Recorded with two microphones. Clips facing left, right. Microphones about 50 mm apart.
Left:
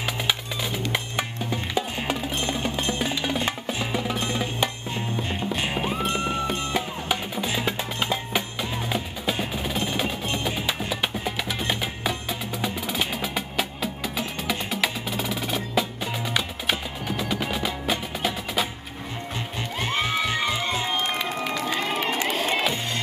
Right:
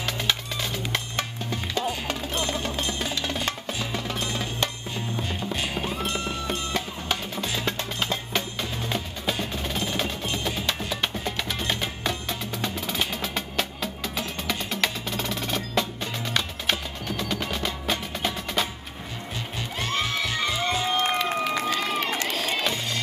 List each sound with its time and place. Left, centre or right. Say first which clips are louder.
0.0 s music: left 1 dB; centre
19.8 s music: left 2 dB; centre
21.6 s run: even; centre